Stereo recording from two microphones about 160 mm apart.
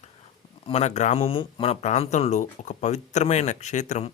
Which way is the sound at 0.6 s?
40° left (ahead or behind).